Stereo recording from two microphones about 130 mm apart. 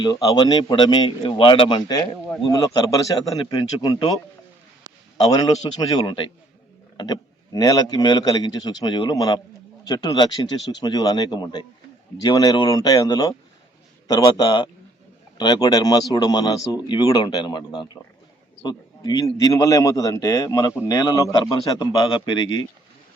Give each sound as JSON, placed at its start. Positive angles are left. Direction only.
{"t": 0.0, "sound": "a man's voice", "side_deg": 30}
{"t": 5.1, "sound": "a man's voice", "side_deg": 35}